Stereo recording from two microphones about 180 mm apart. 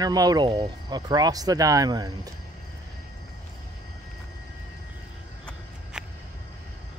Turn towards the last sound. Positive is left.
turn(degrees=-5)  # may be behind; listen again after turning